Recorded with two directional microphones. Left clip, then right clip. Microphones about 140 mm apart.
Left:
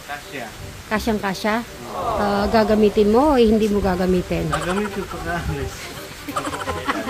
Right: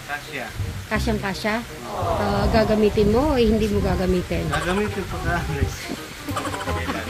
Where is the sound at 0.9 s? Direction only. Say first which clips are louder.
Left 3 dB; 20° left (ahead or behind).